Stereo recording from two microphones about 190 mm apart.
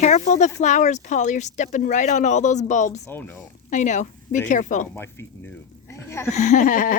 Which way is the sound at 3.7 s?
40° left (ahead or behind).